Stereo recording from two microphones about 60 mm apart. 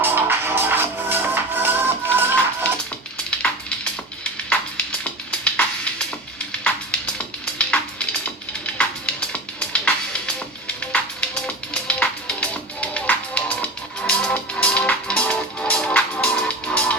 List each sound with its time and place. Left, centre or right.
0.0 s music: right
4.2 s music: centre
7.6 s music: centre